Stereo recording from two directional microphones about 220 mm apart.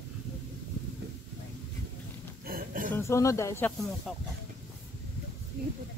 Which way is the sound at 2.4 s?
40° right (ahead or behind).